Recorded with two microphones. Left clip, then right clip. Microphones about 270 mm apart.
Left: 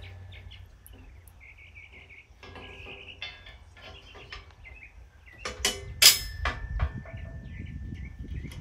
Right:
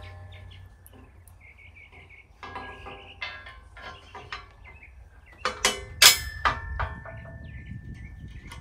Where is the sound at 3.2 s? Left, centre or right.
Centre.